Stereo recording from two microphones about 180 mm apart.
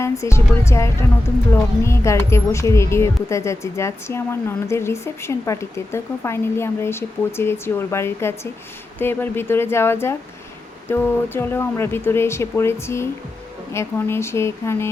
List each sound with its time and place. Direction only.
0.0 s speech: 15° left (ahead or behind)